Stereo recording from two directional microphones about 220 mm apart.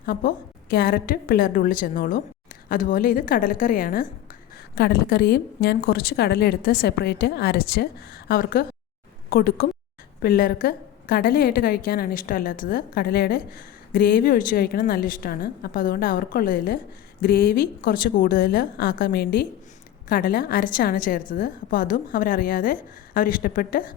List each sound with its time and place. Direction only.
0.0 s a woman's voice: 40° left (ahead or behind)